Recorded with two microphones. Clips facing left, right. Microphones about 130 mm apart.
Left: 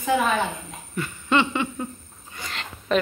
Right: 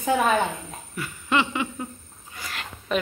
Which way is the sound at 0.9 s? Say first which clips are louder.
Left 2 dB; 5° right (ahead or behind).